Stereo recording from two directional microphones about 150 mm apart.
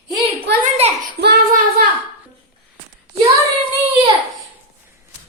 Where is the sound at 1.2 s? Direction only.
90° right.